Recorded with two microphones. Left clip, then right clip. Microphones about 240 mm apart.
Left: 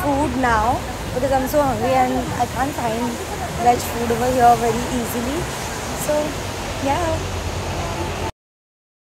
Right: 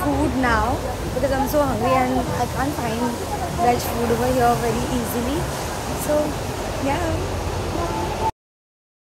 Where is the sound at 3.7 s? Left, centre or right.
Centre.